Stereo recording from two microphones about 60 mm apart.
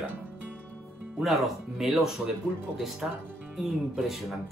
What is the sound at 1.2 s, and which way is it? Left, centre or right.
Speech, centre.